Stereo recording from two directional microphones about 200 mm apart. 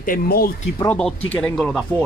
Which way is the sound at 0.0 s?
45° left (ahead or behind).